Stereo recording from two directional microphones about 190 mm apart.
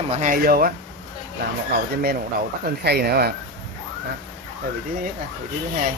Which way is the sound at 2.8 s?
55° right (ahead or behind).